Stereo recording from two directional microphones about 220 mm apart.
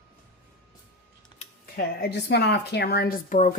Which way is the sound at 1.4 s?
45° left (ahead or behind).